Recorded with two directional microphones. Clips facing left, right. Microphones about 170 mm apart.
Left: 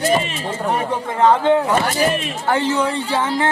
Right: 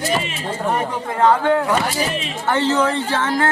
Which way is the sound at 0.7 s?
20° left (ahead or behind).